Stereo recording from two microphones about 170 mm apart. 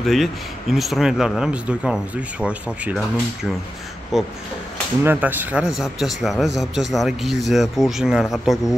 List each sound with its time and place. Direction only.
0.0 s a man's voice: centre (ahead or behind)
4.1 s a man's voice: centre (ahead or behind)